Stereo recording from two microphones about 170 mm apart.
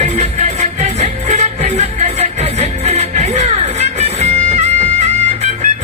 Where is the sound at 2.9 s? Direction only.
40° right (ahead or behind).